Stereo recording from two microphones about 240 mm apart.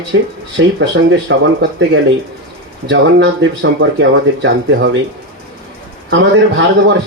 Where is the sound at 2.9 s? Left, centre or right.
Right.